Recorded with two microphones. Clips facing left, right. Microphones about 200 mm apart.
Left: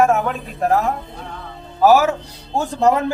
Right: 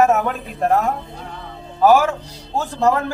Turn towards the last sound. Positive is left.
turn(degrees=15)  # may be behind; listen again after turning